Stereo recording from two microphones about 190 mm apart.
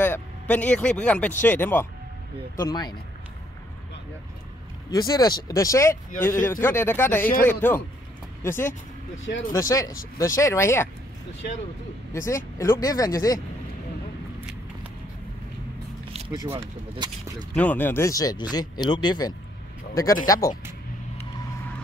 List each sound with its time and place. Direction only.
0.0 s speech: 10° left (ahead or behind)
2.5 s speech: 20° left (ahead or behind)
4.9 s speech: 20° left (ahead or behind)
9.2 s speech: 90° left
9.5 s speech: 15° left (ahead or behind)
12.1 s speech: 15° left (ahead or behind)
14.4 s vehicle: 5° right (ahead or behind)
16.5 s speech: 25° right (ahead or behind)
17.6 s speech: 10° left (ahead or behind)